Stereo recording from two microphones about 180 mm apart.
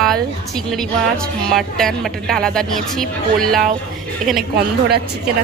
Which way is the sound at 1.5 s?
Centre (ahead or behind).